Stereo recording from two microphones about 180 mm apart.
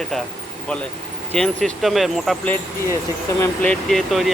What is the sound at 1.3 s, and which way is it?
Speech, 5° left (ahead or behind).